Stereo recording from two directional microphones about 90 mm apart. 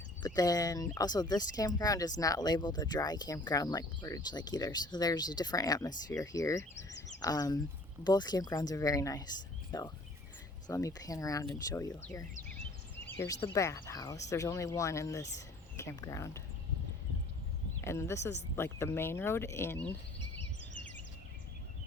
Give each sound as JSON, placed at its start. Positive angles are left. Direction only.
{"t": 0.2, "sound": "speech", "side_deg": 45}
{"t": 13.2, "sound": "speech", "side_deg": 40}
{"t": 17.8, "sound": "speech", "side_deg": 30}